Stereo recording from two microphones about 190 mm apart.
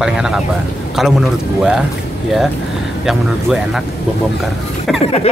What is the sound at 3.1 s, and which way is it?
Speech, centre (ahead or behind).